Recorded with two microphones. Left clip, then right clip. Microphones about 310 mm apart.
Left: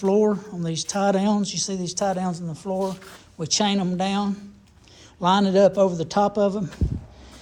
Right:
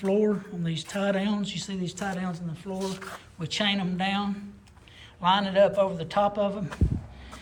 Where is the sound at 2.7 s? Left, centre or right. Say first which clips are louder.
Left 6 dB; centre.